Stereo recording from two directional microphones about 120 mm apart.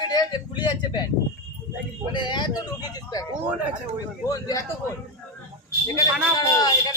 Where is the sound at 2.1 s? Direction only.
40° left (ahead or behind).